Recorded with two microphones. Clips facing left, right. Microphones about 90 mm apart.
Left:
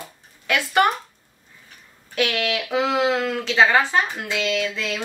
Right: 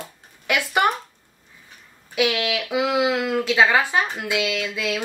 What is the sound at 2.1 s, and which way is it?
Speech, 5° right (ahead or behind).